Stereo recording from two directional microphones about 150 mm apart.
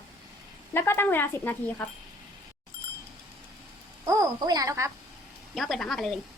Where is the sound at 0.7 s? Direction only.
15° left (ahead or behind).